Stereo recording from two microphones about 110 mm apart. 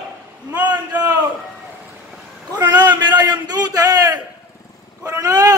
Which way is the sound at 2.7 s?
40° right (ahead or behind).